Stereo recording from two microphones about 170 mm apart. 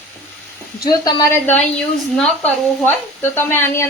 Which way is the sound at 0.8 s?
25° left (ahead or behind).